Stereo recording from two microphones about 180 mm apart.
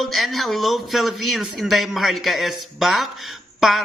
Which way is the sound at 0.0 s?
Centre (ahead or behind).